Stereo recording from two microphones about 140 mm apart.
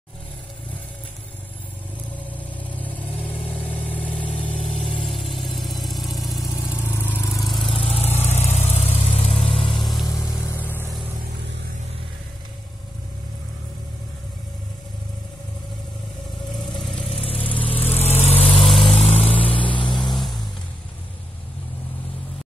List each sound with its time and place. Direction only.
2.3 s vehicle: 10° left (ahead or behind); by 6.8 s 10° right (ahead or behind)
6.8 s vehicle: 15° left (ahead or behind)
7.4 s vehicle: centre (ahead or behind)
8.2 s vehicle: 50° left (ahead or behind)
10.0 s vehicle: 25° left (ahead or behind)
16.9 s vehicle: 40° left (ahead or behind)
17.8 s vehicle: 50° left (ahead or behind)
20.1 s vehicle: centre (ahead or behind)